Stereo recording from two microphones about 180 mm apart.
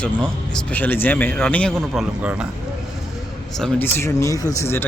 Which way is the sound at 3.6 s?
10° left (ahead or behind).